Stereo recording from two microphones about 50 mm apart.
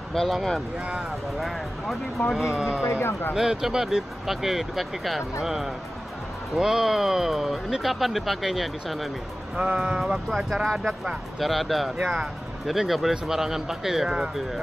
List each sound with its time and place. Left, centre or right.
0.1 s speech: centre
2.3 s speech: centre
2.8 s speech: left
3.3 s speech: centre
9.8 s speech: centre
12.0 s speech: centre
12.6 s speech: centre